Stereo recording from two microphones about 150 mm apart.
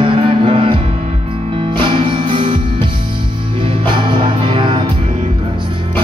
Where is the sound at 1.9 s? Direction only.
35° right (ahead or behind).